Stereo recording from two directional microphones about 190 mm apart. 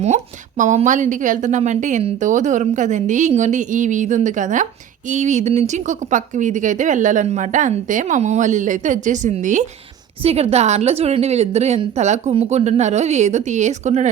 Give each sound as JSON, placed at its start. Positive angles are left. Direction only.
{"t": 0.0, "sound": "speech", "side_deg": -40}